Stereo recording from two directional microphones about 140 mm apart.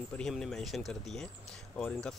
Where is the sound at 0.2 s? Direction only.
5° left (ahead or behind).